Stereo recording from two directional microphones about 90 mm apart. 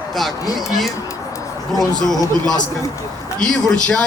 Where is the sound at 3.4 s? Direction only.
10° left (ahead or behind).